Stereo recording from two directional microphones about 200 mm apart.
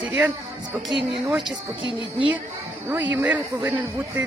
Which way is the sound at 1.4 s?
25° right (ahead or behind).